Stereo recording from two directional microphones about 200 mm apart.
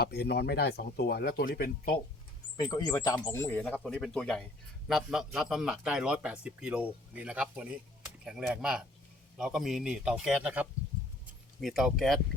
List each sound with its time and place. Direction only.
0.0 s speech: 50° left (ahead or behind)
2.6 s a man's voice: 20° left (ahead or behind); by 12.2 s centre (ahead or behind)